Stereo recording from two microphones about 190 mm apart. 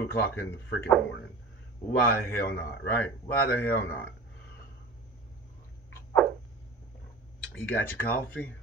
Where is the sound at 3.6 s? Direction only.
10° left (ahead or behind).